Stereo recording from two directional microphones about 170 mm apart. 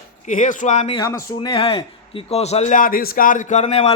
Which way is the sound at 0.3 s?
50° left (ahead or behind).